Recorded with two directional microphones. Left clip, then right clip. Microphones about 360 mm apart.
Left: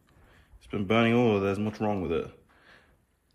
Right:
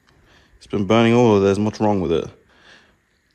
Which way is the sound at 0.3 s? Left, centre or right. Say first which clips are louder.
Right 10 dB; centre.